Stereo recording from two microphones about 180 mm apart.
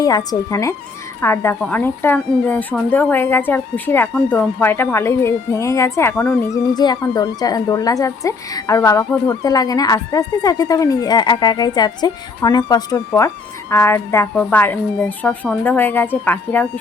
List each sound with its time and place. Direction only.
0.0 s speech: 20° left (ahead or behind)